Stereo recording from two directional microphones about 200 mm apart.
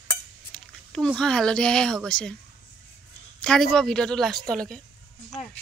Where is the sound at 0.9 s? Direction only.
5° left (ahead or behind).